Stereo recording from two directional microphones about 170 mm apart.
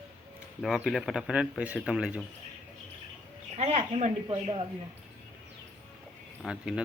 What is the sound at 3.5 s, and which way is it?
Speech, 40° right (ahead or behind).